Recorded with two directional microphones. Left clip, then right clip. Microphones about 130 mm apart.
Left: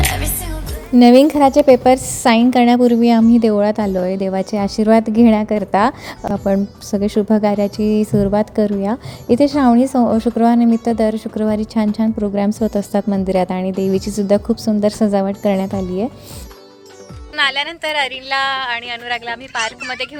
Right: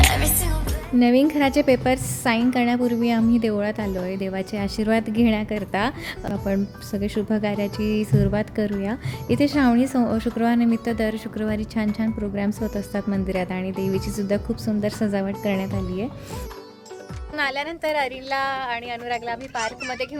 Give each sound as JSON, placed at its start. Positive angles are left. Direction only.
{"t": 0.1, "sound": "music", "side_deg": 0}
{"t": 0.9, "sound": "a woman's voice", "side_deg": 50}
{"t": 1.5, "sound": "a woman's voice", "side_deg": 25}
{"t": 2.2, "sound": "a woman's voice", "side_deg": 55}
{"t": 17.3, "sound": "a woman's voice", "side_deg": -10}